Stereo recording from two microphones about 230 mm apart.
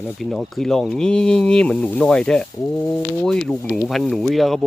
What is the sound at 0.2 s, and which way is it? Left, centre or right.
Speech, centre.